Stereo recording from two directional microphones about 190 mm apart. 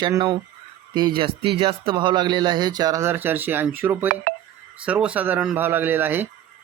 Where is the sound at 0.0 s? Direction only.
20° right (ahead or behind).